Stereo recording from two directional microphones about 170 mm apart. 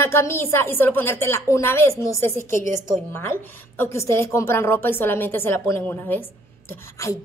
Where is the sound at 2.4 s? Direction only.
50° right (ahead or behind).